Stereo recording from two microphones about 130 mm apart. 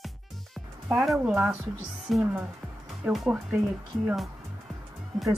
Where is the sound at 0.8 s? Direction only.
Centre (ahead or behind).